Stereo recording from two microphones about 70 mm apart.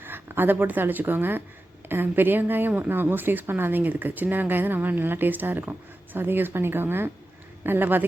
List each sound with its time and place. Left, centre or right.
0.0 s speech: right